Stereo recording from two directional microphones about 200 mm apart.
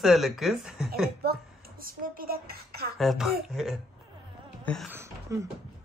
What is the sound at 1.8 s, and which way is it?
A woman's voice, 45° right (ahead or behind).